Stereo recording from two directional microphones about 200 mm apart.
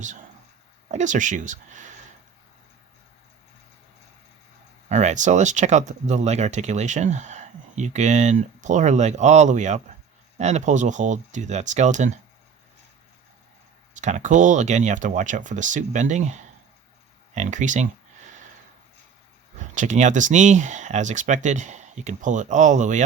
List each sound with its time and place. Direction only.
0.9 s speech: 35° right (ahead or behind)
4.9 s speech: 35° right (ahead or behind)
14.0 s speech: 35° right (ahead or behind)
19.5 s speech: 40° right (ahead or behind)